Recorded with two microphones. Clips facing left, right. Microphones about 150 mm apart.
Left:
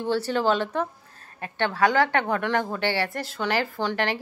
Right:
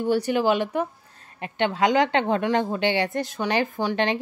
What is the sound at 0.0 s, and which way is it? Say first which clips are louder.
A woman's voice: right 2 dB; 15° right (ahead or behind).